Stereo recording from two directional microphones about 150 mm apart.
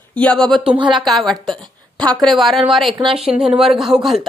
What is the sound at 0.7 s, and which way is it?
Speech, 35° right (ahead or behind).